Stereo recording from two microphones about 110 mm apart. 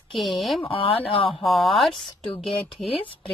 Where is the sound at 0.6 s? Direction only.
55° left (ahead or behind).